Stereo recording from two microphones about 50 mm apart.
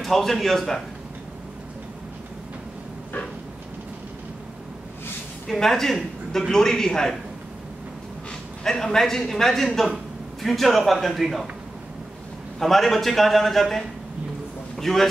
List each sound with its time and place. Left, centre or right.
0.0 s a man's voice: centre
5.5 s a man's voice: centre
8.6 s a man's voice: centre
12.5 s a man's voice: centre